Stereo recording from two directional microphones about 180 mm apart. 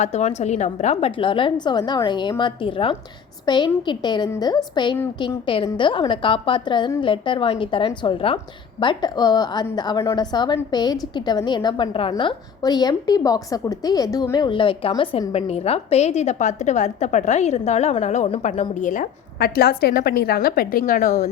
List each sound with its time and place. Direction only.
0.0 s a woman's voice: 40° left (ahead or behind)